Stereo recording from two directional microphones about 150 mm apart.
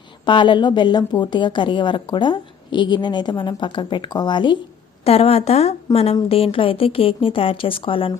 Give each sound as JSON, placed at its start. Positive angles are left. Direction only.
{"t": 0.3, "sound": "a woman's voice", "side_deg": 30}
{"t": 5.0, "sound": "a woman's voice", "side_deg": 40}